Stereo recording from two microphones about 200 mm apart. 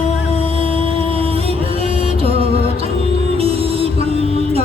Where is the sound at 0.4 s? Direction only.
30° right (ahead or behind).